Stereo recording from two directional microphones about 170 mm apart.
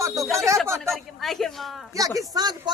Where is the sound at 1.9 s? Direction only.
20° right (ahead or behind).